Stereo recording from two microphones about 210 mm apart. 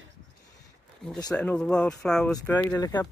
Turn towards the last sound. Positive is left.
turn(degrees=20)  # may be behind; listen again after turning